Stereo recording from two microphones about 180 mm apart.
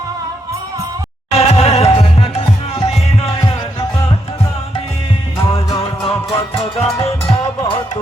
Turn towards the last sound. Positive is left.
turn(degrees=35)  # may be behind; listen again after turning